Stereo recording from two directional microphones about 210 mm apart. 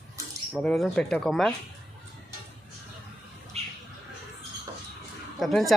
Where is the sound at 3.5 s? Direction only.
30° right (ahead or behind).